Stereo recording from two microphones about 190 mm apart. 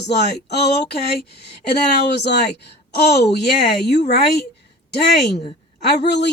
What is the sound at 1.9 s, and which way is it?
Speech, 60° left (ahead or behind).